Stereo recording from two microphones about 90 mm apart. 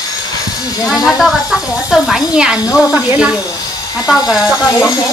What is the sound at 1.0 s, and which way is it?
Speech, centre (ahead or behind).